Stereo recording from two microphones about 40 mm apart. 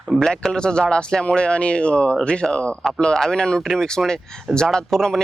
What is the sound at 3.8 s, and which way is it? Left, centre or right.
Speech, centre.